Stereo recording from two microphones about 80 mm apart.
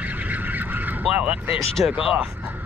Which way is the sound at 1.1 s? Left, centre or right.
Centre.